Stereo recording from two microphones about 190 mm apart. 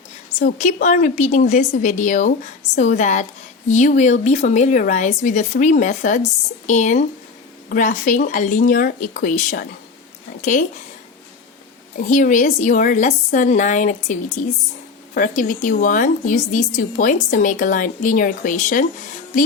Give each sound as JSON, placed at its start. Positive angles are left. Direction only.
{"t": 0.3, "sound": "a woman's voice", "side_deg": 40}
{"t": 11.9, "sound": "a woman's voice", "side_deg": 45}